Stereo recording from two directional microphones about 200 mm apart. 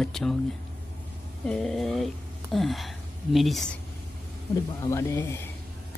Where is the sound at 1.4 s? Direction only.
Centre (ahead or behind).